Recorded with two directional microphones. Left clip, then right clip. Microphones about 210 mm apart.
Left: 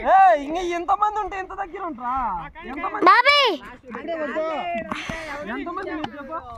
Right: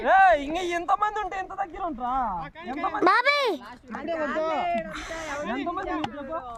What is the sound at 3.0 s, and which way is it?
Speech, centre (ahead or behind).